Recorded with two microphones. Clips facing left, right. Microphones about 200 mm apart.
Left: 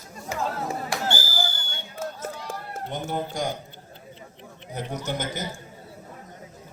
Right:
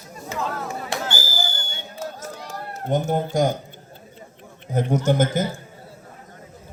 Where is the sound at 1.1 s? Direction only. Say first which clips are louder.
Even; 45° right (ahead or behind).